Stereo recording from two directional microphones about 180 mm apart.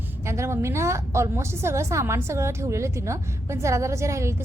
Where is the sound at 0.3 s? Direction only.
15° right (ahead or behind).